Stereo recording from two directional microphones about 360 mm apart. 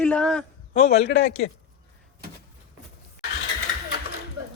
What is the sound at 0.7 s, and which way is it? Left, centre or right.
Speech, centre.